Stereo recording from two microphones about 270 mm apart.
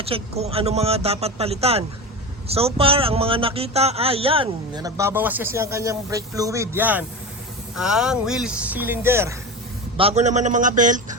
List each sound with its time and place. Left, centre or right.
0.0 s a man's voice: right
10.0 s a man's voice: right